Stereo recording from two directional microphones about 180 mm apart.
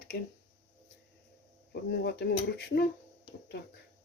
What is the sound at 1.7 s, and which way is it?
Speech, 65° left (ahead or behind).